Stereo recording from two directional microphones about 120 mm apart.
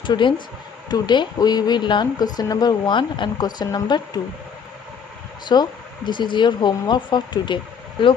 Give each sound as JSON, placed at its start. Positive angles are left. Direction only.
{"t": 0.0, "sound": "speech", "side_deg": 40}
{"t": 5.5, "sound": "speech", "side_deg": 40}